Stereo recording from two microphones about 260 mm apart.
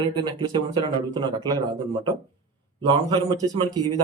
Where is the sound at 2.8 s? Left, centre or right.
Centre.